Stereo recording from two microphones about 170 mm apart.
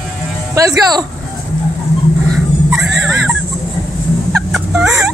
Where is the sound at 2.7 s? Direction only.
Centre (ahead or behind).